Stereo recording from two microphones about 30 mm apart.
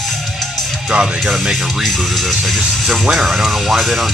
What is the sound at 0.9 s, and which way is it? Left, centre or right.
Speech, right.